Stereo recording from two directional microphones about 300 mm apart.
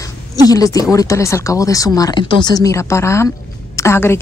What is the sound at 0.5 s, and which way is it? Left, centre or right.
Speech, centre.